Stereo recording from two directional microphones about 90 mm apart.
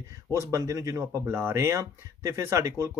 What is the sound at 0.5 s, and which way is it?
Speech, 35° right (ahead or behind).